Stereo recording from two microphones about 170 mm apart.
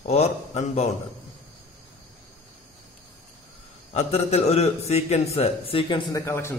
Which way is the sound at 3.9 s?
40° left (ahead or behind).